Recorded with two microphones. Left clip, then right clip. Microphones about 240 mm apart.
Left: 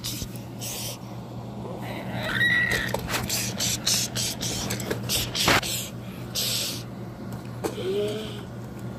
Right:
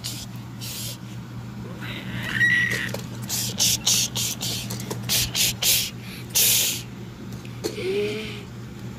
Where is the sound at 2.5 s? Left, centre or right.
Right.